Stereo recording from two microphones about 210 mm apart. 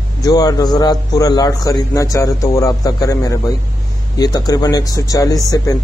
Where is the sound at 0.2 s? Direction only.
15° left (ahead or behind).